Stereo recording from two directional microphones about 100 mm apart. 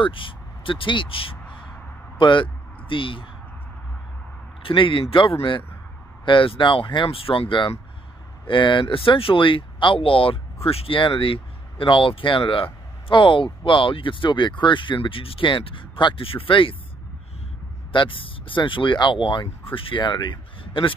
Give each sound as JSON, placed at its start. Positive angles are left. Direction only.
{"t": 0.0, "sound": "speech", "side_deg": 60}
{"t": 4.6, "sound": "speech", "side_deg": 60}
{"t": 17.9, "sound": "speech", "side_deg": 60}